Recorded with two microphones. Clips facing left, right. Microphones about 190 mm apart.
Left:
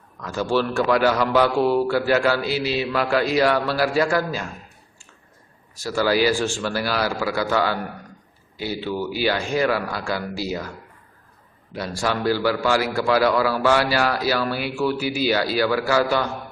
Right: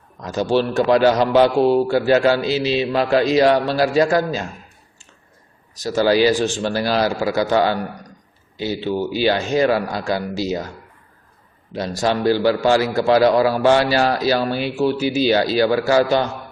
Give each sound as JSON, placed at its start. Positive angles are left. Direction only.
{"t": 0.2, "sound": "a man's voice", "side_deg": -20}
{"t": 5.7, "sound": "a man's voice", "side_deg": -20}
{"t": 11.7, "sound": "a man's voice", "side_deg": -25}